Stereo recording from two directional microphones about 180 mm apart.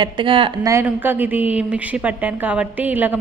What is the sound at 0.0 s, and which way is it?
Speech, 30° right (ahead or behind).